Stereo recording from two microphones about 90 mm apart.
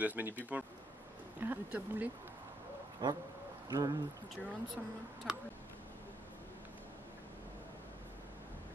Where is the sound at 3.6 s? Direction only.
45° right (ahead or behind).